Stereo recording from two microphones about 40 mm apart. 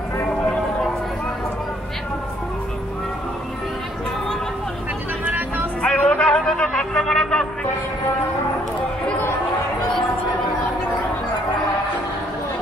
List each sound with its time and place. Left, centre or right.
5.2 s music: right
5.8 s music: left